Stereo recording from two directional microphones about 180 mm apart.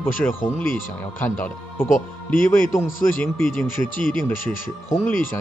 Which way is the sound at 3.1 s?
15° left (ahead or behind).